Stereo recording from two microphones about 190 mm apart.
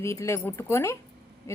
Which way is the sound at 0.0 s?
15° left (ahead or behind).